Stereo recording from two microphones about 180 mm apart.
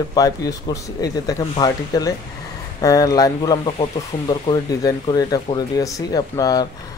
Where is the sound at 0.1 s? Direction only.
20° left (ahead or behind).